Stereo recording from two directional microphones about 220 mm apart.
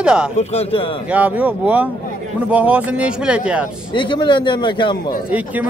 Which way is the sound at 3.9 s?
20° left (ahead or behind).